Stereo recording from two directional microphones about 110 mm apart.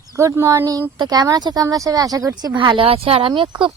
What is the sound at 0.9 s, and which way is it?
Speech, 40° right (ahead or behind).